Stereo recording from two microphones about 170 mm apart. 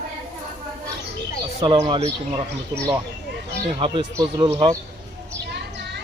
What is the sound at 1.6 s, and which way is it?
Speech, 35° right (ahead or behind).